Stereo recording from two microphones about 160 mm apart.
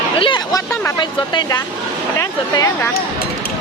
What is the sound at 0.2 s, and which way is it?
Speech, 30° left (ahead or behind).